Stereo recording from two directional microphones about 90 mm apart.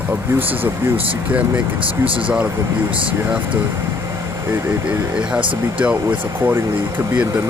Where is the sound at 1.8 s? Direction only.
75° right (ahead or behind).